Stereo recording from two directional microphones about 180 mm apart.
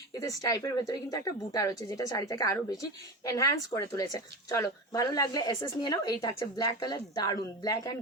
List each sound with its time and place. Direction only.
0.1 s speech: 20° left (ahead or behind)